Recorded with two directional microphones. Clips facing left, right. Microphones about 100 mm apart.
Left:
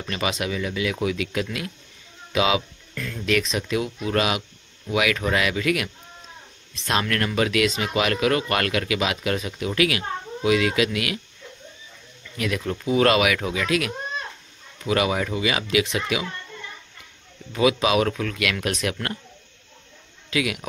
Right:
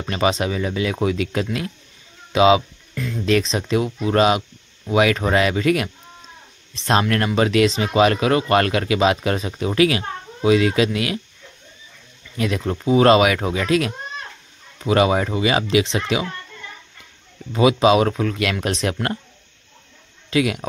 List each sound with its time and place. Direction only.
0.0 s speech: 30° right (ahead or behind)
2.9 s a sound: 15° right (ahead or behind)
3.3 s speech: 30° right (ahead or behind)
12.4 s speech: 30° right (ahead or behind)
17.5 s speech: 30° right (ahead or behind)
20.2 s speech: 30° right (ahead or behind)